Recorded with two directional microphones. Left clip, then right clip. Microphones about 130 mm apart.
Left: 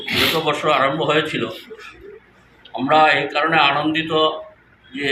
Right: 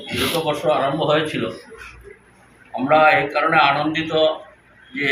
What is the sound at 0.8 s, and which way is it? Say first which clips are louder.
Speech: left 1 dB; centre (ahead or behind).